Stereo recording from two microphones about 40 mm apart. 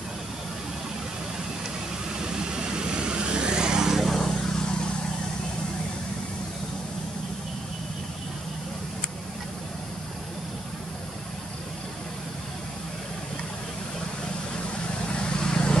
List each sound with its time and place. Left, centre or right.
2.2 s vehicle: centre
4.0 s vehicle: centre
15.1 s vehicle: left